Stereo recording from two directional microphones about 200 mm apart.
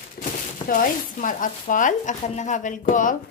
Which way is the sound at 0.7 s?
40° left (ahead or behind).